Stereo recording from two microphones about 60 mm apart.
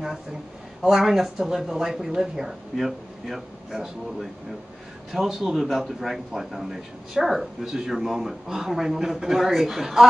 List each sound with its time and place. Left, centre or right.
0.8 s speech: centre